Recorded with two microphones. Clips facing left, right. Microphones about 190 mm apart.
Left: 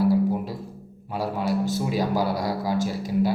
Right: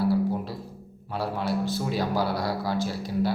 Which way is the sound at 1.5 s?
40° left (ahead or behind).